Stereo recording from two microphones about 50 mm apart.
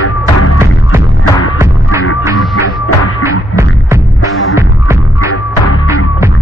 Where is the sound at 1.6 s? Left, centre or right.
Right.